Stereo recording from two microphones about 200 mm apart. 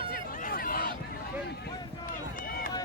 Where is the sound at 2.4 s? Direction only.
45° left (ahead or behind).